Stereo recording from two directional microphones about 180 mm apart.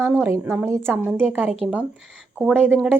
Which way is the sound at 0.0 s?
10° right (ahead or behind).